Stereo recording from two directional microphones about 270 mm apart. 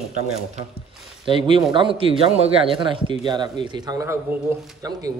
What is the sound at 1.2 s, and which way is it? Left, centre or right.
Speech, centre.